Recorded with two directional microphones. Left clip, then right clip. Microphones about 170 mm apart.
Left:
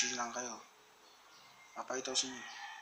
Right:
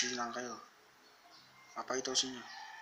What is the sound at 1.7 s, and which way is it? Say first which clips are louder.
Speech: right 2 dB; 10° right (ahead or behind).